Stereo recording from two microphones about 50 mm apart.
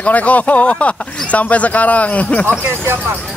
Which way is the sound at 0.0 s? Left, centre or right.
Left.